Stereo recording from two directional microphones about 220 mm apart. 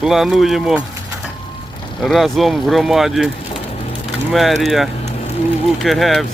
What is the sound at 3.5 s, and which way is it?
Rain, 25° left (ahead or behind).